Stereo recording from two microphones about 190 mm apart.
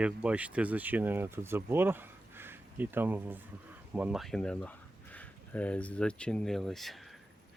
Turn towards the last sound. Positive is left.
turn(degrees=0)  # may be behind; listen again after turning